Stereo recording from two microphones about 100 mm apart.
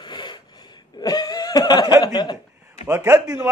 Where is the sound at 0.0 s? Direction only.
50° left (ahead or behind).